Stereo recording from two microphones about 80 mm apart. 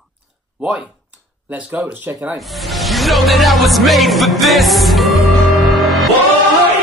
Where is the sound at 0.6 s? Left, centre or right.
Centre.